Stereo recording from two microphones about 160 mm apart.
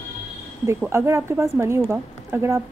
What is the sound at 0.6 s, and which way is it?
A woman's voice, 15° right (ahead or behind).